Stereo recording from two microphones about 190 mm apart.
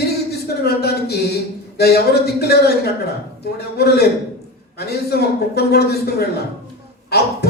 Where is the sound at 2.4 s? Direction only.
55° left (ahead or behind).